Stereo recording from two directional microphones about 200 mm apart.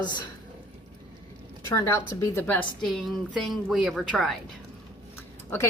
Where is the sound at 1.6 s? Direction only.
15° left (ahead or behind).